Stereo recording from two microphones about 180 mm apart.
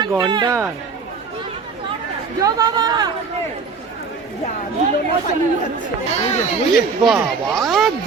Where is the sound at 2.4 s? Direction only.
20° right (ahead or behind).